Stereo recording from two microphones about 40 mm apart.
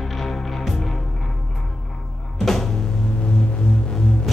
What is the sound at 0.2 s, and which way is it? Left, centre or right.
Music, centre.